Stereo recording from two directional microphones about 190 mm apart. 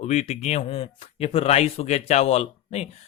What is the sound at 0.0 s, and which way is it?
Speech, 35° left (ahead or behind).